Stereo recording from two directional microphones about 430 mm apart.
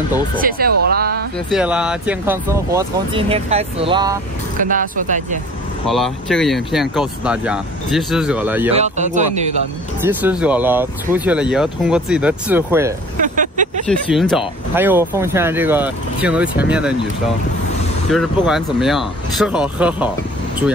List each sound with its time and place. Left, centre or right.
0.4 s speech: centre
1.5 s speech: centre
5.9 s speech: centre
8.7 s speech: centre
10.0 s speech: centre
13.2 s vehicle: centre
13.8 s speech: centre
18.1 s speech: centre